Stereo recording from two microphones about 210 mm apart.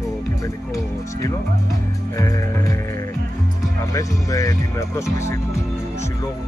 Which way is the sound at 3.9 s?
15° left (ahead or behind).